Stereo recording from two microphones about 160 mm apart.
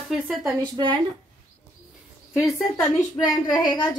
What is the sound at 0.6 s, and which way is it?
Speech, 30° right (ahead or behind).